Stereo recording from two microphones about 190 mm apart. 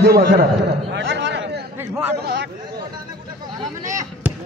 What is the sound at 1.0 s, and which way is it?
Speech, 70° right (ahead or behind).